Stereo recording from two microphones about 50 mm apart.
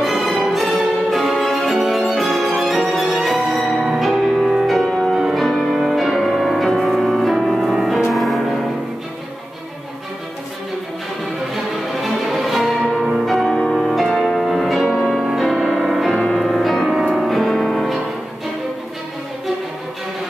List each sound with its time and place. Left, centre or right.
0.0 s music: centre
5.4 s music: centre
12.0 s music: centre
13.5 s music: centre
13.8 s music: centre